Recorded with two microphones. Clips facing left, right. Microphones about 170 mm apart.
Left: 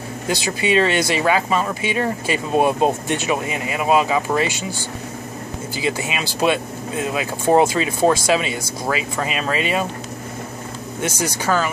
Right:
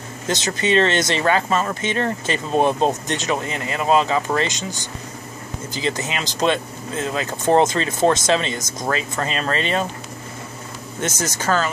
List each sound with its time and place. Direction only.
0.5 s speech: 10° left (ahead or behind)
5.8 s speech: 10° left (ahead or behind)
8.0 s speech: 20° right (ahead or behind)
8.3 s speech: 10° left (ahead or behind)
11.0 s speech: 10° left (ahead or behind)